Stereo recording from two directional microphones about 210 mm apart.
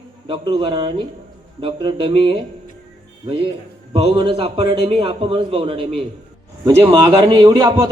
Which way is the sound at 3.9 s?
25° right (ahead or behind).